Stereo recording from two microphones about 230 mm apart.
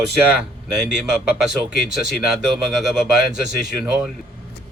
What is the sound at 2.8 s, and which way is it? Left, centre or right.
Speech, centre.